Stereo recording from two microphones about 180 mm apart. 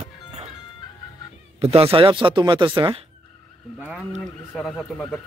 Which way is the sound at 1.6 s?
30° right (ahead or behind).